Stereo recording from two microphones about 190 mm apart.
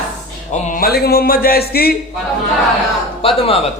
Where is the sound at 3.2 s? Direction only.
30° left (ahead or behind).